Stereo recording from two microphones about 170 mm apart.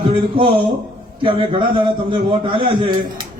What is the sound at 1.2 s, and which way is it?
A man's voice, 30° right (ahead or behind).